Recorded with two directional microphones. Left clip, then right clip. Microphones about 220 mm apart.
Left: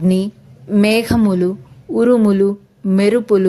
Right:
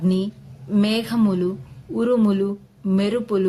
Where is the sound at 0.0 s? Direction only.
30° left (ahead or behind).